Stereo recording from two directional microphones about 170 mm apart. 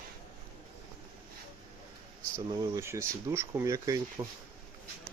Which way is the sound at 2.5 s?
15° right (ahead or behind).